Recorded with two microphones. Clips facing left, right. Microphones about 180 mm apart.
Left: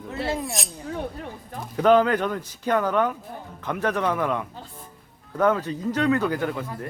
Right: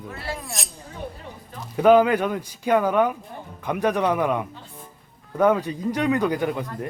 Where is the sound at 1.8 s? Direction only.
10° right (ahead or behind).